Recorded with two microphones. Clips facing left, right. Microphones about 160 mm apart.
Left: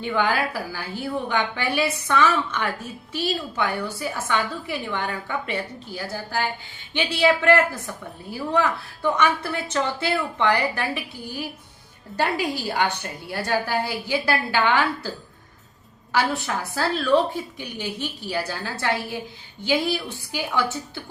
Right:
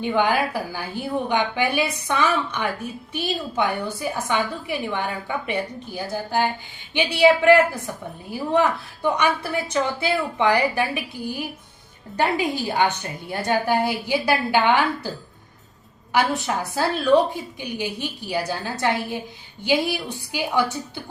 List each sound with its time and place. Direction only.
0.0 s a woman's voice: 20° right (ahead or behind)
12.1 s a woman's voice: 20° right (ahead or behind)
16.1 s a woman's voice: 20° right (ahead or behind)
18.3 s a woman's voice: 15° right (ahead or behind)